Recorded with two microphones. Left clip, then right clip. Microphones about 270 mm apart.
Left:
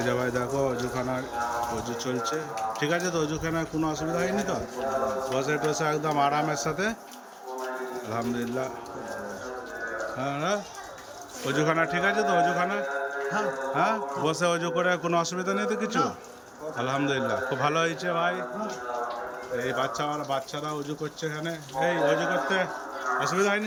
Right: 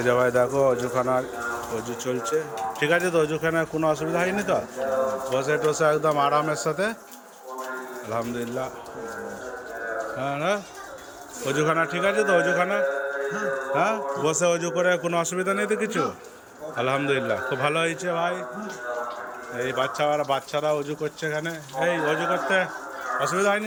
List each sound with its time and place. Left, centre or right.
0.0 s a man's voice: centre
2.8 s a man's voice: centre
8.1 s a man's voice: centre
10.2 s a man's voice: centre
19.5 s a man's voice: centre